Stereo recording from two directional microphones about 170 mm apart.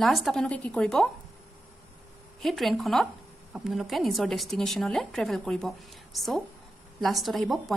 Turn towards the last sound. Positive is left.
turn(degrees=0)  # may be behind; listen again after turning